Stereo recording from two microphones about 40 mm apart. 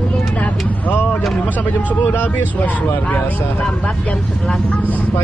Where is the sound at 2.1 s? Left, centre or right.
Left.